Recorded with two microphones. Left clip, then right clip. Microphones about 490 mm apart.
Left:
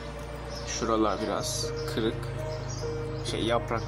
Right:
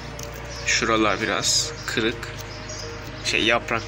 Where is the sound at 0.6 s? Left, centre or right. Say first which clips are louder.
Right 7 dB; left.